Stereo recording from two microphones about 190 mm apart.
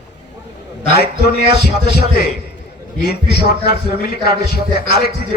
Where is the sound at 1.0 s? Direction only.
55° left (ahead or behind).